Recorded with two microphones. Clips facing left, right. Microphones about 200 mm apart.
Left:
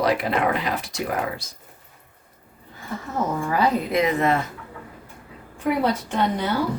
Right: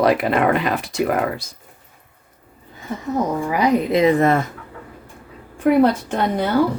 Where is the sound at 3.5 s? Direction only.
15° right (ahead or behind).